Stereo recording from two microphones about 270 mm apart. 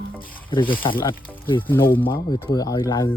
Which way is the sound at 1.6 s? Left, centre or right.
Centre.